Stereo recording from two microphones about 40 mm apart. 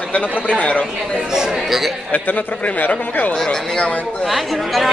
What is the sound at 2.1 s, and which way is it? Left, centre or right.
Speech, left.